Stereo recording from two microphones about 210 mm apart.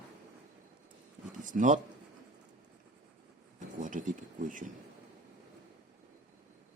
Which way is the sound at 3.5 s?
40° right (ahead or behind).